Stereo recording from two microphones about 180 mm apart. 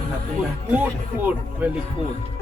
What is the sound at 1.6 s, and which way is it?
Speech, 10° right (ahead or behind).